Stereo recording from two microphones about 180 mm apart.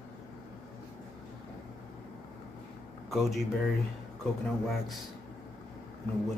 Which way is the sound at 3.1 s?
Centre (ahead or behind).